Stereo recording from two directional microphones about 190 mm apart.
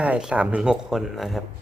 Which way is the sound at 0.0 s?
5° right (ahead or behind).